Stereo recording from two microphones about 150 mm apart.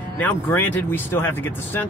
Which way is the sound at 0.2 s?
10° left (ahead or behind).